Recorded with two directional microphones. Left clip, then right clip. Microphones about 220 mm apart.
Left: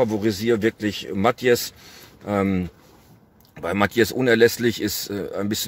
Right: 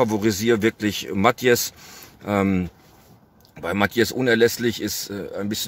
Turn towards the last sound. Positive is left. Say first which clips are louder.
# left 2 dB
turn(degrees=15)  # may be behind; listen again after turning